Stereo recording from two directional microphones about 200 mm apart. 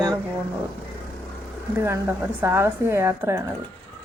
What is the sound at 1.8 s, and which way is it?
Speech, 15° right (ahead or behind).